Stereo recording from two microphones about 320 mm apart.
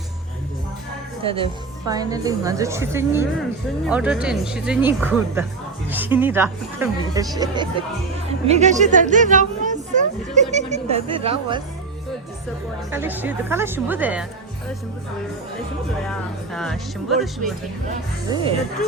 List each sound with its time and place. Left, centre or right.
1.2 s a woman's voice: centre
12.9 s speech: centre
16.0 s speech: centre